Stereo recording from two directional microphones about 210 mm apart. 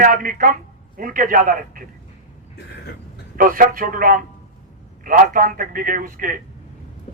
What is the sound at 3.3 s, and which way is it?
Speech, 40° right (ahead or behind).